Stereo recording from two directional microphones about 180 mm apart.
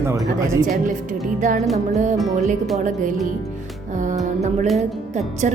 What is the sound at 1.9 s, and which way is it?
Music, 45° right (ahead or behind).